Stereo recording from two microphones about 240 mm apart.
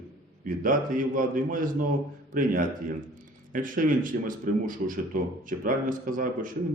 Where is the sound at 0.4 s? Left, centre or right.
Right.